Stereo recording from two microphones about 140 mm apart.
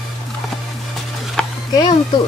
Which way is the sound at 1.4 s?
5° left (ahead or behind).